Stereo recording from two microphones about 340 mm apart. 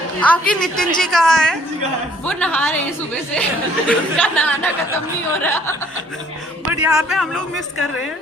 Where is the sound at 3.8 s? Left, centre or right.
Centre.